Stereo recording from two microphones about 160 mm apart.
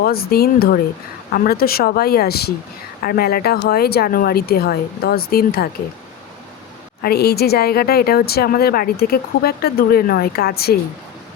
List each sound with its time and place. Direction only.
0.0 s speech: 70° left (ahead or behind)
7.0 s speech: 80° left